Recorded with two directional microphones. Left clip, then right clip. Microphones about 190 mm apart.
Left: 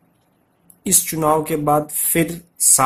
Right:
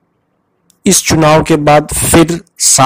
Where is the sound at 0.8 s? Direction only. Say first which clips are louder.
Right 10 dB; 45° right (ahead or behind).